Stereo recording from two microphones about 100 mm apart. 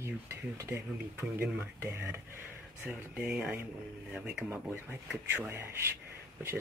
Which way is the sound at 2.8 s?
10° right (ahead or behind).